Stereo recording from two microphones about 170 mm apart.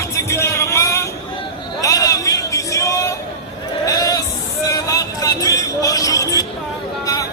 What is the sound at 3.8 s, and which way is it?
Sheep, 20° left (ahead or behind).